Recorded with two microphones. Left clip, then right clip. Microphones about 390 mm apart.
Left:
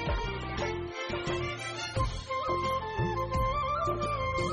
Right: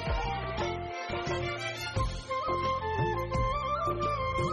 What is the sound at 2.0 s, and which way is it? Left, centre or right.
Music, centre.